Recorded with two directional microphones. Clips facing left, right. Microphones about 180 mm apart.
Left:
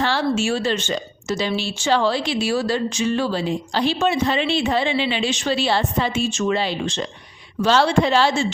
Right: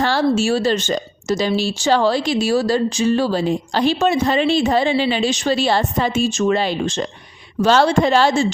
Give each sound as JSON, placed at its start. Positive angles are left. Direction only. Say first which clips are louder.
{"t": 0.0, "sound": "speech", "louder": "right 4 dB", "side_deg": -40}